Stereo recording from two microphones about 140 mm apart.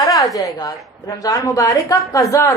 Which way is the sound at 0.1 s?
25° left (ahead or behind).